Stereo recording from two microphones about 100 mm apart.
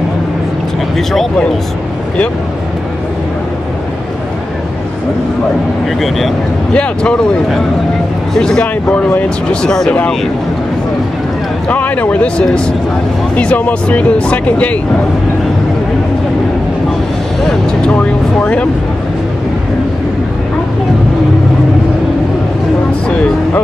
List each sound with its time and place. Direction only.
0.9 s speech: 5° left (ahead or behind)
5.9 s speech: centre (ahead or behind)
11.7 s speech: 15° left (ahead or behind)
17.9 s vehicle: 15° left (ahead or behind)
23.0 s music: 10° left (ahead or behind)